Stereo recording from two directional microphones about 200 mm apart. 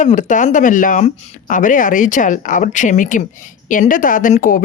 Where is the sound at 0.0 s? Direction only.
40° left (ahead or behind).